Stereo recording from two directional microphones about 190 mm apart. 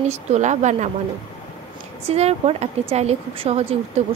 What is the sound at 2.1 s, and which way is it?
A woman's voice, 35° right (ahead or behind).